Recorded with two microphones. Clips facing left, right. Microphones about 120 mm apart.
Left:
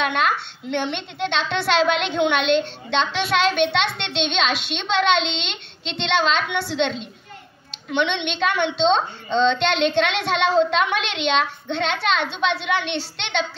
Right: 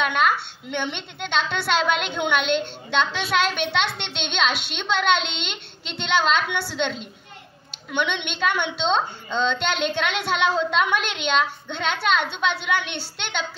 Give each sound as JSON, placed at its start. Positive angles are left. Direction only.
{"t": 0.0, "sound": "a woman's voice", "side_deg": 0}
{"t": 8.1, "sound": "a woman's voice", "side_deg": 0}